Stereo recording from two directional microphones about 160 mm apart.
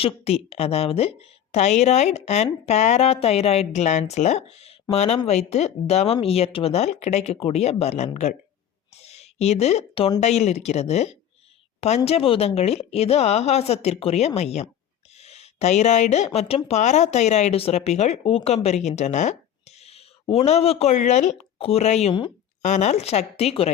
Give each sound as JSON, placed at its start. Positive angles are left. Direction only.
{"t": 0.0, "sound": "a woman's voice", "side_deg": 40}